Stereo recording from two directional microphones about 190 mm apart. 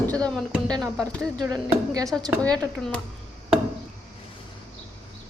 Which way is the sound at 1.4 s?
20° right (ahead or behind).